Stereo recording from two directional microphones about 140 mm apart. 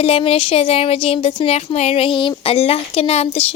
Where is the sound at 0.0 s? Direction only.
45° left (ahead or behind).